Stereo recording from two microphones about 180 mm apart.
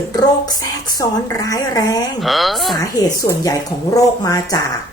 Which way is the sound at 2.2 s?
Centre (ahead or behind).